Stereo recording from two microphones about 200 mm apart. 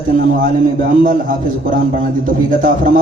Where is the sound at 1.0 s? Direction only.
45° right (ahead or behind).